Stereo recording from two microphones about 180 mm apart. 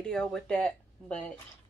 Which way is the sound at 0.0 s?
5° left (ahead or behind).